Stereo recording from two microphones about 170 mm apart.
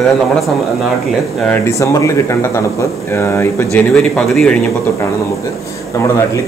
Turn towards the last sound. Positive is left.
turn(degrees=5)  # may be behind; listen again after turning